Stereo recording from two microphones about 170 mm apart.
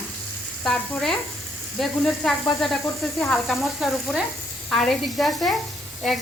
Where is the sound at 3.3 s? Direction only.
Centre (ahead or behind).